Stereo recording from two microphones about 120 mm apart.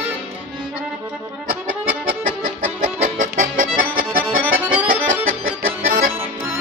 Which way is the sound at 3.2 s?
90° right.